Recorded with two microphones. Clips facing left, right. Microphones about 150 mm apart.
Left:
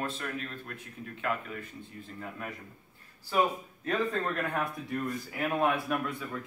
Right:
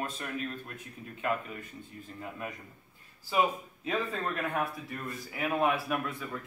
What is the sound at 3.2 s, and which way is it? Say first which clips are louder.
A man's voice: even; 10° right (ahead or behind).